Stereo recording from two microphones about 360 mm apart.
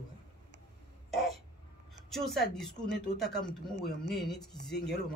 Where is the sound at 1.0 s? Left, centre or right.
Centre.